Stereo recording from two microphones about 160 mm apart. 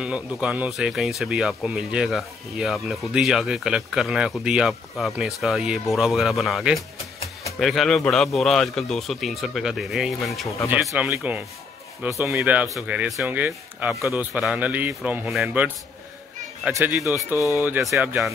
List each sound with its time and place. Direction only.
0.0 s speech: 5° right (ahead or behind)
17.0 s speech: 20° left (ahead or behind)
17.6 s speech: 10° right (ahead or behind)
17.8 s speech: centre (ahead or behind)